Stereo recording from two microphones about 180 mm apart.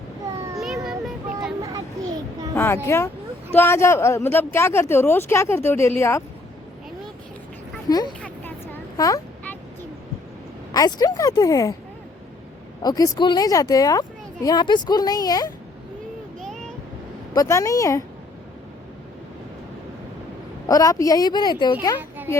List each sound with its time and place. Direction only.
0.9 s vehicle: centre (ahead or behind)
2.6 s speech: 15° left (ahead or behind)
7.9 s speech: 20° left (ahead or behind)
8.2 s a sound: 10° left (ahead or behind)
9.0 s speech: 20° left (ahead or behind)
10.8 s speech: 20° left (ahead or behind)
12.8 s speech: 20° left (ahead or behind)
17.3 s speech: 15° left (ahead or behind)
20.7 s speech: 20° left (ahead or behind)